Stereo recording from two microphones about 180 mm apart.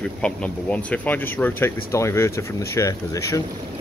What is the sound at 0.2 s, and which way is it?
Speech, 5° left (ahead or behind).